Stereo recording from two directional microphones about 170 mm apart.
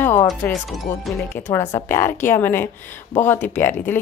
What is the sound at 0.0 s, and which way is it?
Music, 15° left (ahead or behind).